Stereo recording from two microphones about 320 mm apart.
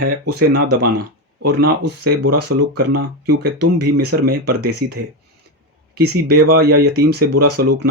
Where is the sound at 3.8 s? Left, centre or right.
Right.